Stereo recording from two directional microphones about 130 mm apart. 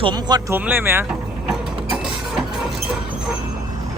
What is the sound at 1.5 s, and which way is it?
Mechanisms, 5° right (ahead or behind).